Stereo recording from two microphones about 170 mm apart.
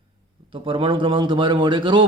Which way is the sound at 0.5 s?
30° right (ahead or behind).